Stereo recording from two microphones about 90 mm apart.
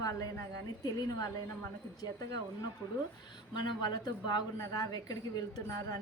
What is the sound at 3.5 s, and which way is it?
Speech, 55° left (ahead or behind).